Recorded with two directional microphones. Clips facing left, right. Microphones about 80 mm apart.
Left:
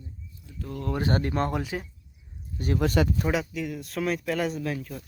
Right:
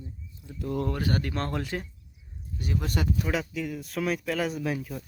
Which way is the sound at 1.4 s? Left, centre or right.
Centre.